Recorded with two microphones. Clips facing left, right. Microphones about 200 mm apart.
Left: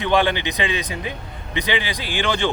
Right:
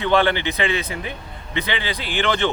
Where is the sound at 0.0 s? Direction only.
15° left (ahead or behind).